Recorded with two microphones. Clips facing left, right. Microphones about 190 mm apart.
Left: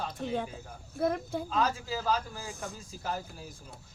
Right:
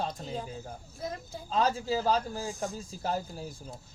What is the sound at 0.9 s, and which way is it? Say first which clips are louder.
Speech: left 10 dB; 60° left (ahead or behind).